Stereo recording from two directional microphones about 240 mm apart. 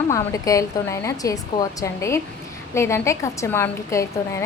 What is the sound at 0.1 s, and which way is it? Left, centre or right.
A woman's voice, centre.